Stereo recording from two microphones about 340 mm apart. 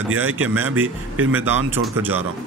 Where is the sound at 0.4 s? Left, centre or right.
Centre.